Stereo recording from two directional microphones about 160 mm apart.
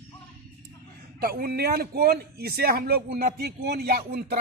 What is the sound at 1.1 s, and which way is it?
A man's voice, 70° right (ahead or behind).